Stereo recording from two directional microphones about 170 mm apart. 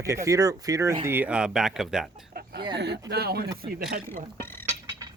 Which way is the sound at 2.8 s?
85° right.